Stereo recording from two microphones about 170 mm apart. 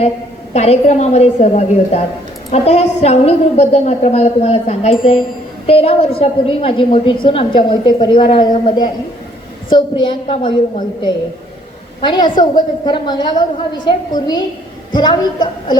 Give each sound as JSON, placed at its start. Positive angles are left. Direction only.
{"t": 0.5, "sound": "a woman's voice", "side_deg": 40}
{"t": 11.9, "sound": "a woman's voice", "side_deg": 30}